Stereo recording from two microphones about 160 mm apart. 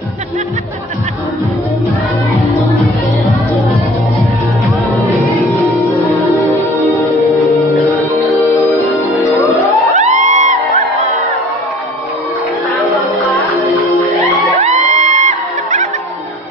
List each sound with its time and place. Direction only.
9.9 s music: 50° right (ahead or behind)
14.6 s music: 45° right (ahead or behind)